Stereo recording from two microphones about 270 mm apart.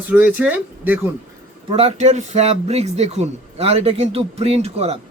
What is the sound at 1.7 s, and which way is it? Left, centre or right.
A man's voice, right.